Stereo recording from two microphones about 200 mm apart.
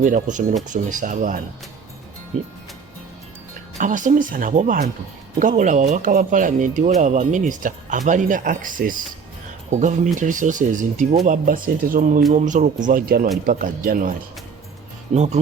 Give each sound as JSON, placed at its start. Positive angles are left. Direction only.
{"t": 0.0, "sound": "speech", "side_deg": -40}
{"t": 3.8, "sound": "speech", "side_deg": -40}